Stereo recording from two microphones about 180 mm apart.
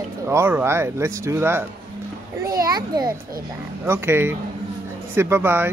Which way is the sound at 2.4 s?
20° right (ahead or behind).